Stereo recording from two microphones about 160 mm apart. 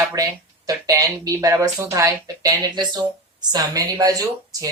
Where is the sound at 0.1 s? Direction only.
20° right (ahead or behind).